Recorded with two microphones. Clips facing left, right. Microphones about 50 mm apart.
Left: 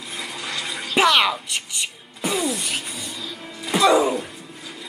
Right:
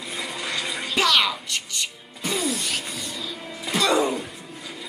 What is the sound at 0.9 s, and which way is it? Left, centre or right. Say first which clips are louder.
Music: left 4 dB; left.